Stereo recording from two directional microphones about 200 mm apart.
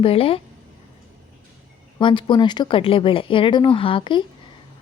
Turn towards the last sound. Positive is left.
turn(degrees=25)  # may be behind; listen again after turning